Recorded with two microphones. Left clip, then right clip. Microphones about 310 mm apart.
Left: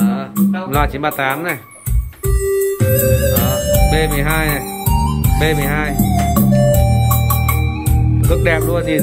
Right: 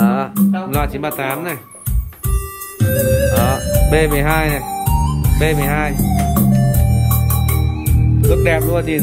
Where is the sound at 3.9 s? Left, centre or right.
Centre.